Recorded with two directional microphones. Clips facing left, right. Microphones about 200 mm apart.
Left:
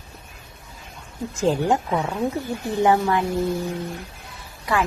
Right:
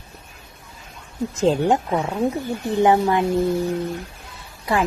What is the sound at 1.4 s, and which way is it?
A woman's voice, 20° right (ahead or behind).